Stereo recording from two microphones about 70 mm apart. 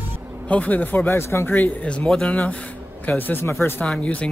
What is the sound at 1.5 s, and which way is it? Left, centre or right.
Speech, left.